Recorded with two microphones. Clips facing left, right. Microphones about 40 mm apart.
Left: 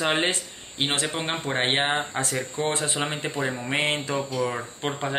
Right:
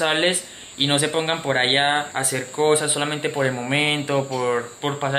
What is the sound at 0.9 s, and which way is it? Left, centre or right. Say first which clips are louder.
Speech: right 8 dB; right.